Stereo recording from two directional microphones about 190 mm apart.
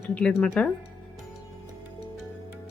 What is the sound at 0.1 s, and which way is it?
Speech, 5° left (ahead or behind).